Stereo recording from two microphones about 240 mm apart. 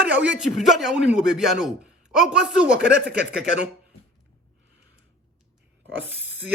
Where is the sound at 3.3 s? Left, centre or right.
Right.